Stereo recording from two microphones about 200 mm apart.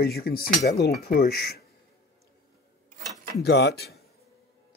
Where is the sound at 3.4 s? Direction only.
55° left (ahead or behind).